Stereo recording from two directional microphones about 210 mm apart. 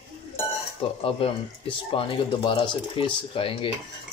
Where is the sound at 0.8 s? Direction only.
25° left (ahead or behind).